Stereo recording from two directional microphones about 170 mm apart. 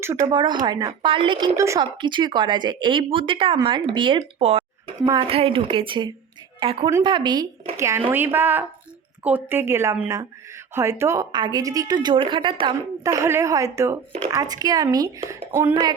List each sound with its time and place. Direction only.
0.0 s a woman's voice: 15° right (ahead or behind)